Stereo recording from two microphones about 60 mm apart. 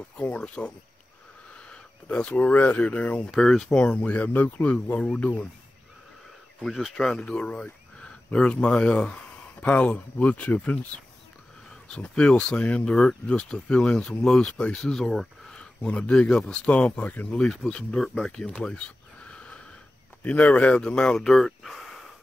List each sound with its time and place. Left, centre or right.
0.4 s speech: centre
1.7 s a sound: centre
2.5 s speech: left
3.3 s speech: centre
6.6 s speech: centre; by 10.9 s left
11.9 s speech: centre
17.4 s speech: centre
18.1 s a sound: centre
20.4 s speech: centre
21.3 s speech: centre